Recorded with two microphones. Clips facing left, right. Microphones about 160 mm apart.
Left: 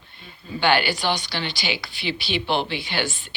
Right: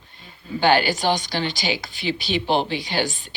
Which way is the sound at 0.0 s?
40° right (ahead or behind).